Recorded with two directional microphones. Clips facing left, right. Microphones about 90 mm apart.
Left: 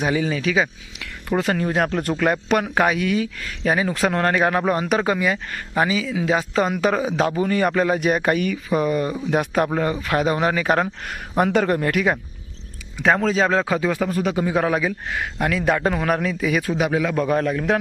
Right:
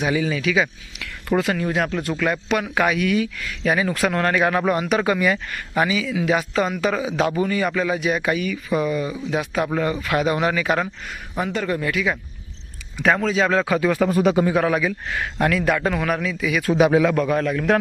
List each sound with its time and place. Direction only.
0.0 s speech: 35° left (ahead or behind)
9.7 s speech: 30° left (ahead or behind)
11.1 s speech: 75° left (ahead or behind)
11.7 s speech: 55° left (ahead or behind)
13.0 s speech: 30° left (ahead or behind)
13.5 s speech: 25° left (ahead or behind)
14.1 s a man's voice: 10° right (ahead or behind)
14.5 s speech: 25° left (ahead or behind)
15.1 s speech: 15° left (ahead or behind)
15.6 s speech: 30° left (ahead or behind)
16.0 s speech: 40° left (ahead or behind)